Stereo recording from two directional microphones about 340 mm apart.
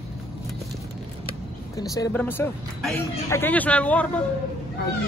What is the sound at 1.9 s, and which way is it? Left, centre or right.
Speech, centre.